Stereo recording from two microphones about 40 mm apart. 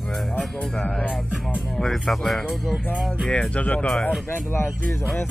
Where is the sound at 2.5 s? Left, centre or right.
Centre.